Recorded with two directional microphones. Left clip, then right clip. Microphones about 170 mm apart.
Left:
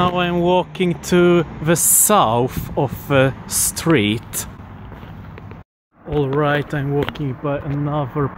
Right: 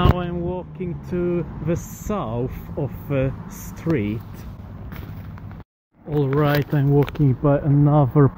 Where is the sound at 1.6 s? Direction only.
40° left (ahead or behind).